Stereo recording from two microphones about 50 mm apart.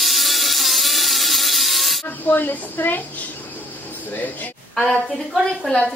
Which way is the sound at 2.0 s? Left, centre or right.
Left.